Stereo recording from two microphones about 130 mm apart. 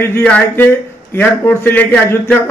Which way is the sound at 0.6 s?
20° left (ahead or behind).